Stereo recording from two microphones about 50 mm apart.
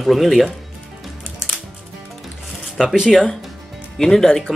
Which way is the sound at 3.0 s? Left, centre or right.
Centre.